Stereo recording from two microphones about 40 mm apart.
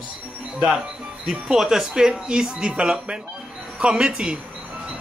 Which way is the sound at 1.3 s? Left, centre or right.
Centre.